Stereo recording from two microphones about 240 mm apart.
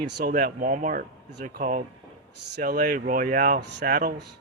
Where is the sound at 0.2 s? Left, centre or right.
Right.